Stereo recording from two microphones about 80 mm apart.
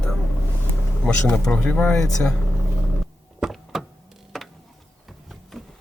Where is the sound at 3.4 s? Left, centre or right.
Centre.